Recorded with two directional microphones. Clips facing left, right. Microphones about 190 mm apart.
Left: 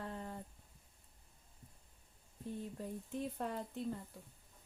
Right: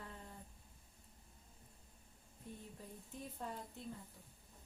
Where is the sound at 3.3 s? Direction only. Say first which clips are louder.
Left 7 dB; 70° left (ahead or behind).